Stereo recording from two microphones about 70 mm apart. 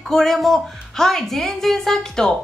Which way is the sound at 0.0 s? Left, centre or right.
Centre.